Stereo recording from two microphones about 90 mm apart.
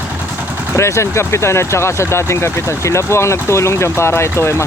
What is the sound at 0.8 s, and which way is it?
Speech, 30° left (ahead or behind).